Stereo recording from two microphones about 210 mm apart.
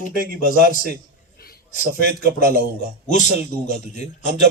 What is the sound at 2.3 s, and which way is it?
Speech, 45° right (ahead or behind).